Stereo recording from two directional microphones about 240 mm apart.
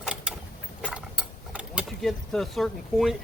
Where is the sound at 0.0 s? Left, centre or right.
Centre.